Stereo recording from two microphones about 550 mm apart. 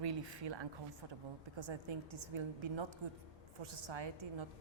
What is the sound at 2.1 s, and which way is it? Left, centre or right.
A woman's voice, right.